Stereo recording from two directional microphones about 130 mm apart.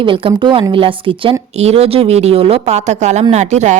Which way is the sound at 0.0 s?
40° right (ahead or behind).